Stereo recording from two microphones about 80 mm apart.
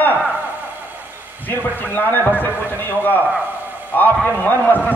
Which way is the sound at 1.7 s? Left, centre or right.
Left.